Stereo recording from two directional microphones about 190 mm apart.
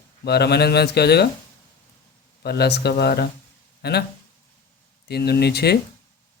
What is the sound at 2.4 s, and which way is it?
Speech, 60° left (ahead or behind).